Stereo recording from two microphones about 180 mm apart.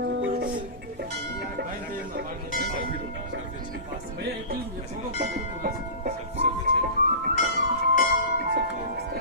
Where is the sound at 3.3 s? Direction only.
90° right.